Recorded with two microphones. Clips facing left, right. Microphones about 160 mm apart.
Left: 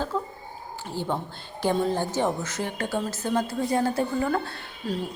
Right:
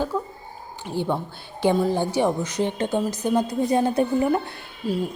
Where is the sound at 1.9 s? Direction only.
15° right (ahead or behind).